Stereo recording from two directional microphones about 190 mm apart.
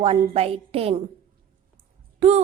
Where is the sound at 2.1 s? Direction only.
35° right (ahead or behind).